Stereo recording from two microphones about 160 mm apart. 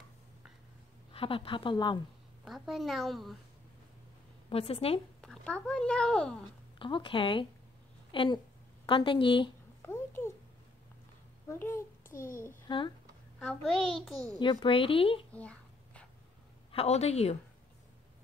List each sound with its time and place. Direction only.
1.1 s a woman's voice: 35° left (ahead or behind)
2.4 s a woman's voice: centre (ahead or behind)
4.5 s a woman's voice: 35° left (ahead or behind)
5.2 s speech: 5° left (ahead or behind)
6.8 s a woman's voice: 30° left (ahead or behind)
9.8 s a sound: 15° left (ahead or behind)
11.4 s a child's voice: 15° left (ahead or behind)
12.6 s speech: 30° left (ahead or behind)
13.5 s a woman's voice: centre (ahead or behind)
14.4 s a woman's voice: 30° left (ahead or behind)
15.3 s a sound: 10° left (ahead or behind)
16.7 s a woman's voice: 40° left (ahead or behind)